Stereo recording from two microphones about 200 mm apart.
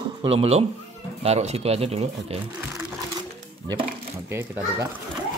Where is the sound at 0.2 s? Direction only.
30° right (ahead or behind).